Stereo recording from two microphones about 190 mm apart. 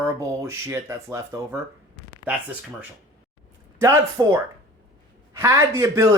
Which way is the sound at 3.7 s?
15° right (ahead or behind).